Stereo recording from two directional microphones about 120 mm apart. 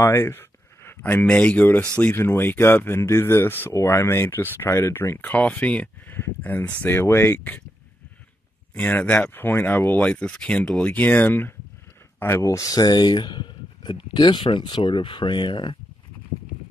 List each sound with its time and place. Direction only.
0.0 s a sound: 20° left (ahead or behind)
1.2 s speech: 10° left (ahead or behind)
8.7 s speech: 15° left (ahead or behind); by 15.8 s 40° left (ahead or behind)